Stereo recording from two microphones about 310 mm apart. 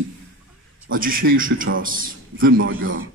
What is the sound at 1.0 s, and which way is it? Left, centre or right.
A man's voice, right.